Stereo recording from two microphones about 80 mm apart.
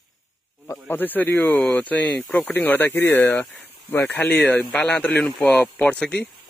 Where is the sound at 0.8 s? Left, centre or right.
Left.